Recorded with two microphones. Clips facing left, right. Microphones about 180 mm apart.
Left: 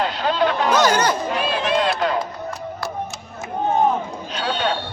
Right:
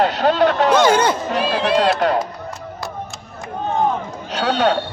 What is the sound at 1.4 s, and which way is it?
Run, 35° right (ahead or behind).